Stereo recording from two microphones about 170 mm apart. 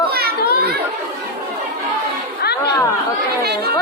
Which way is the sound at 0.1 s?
65° right (ahead or behind).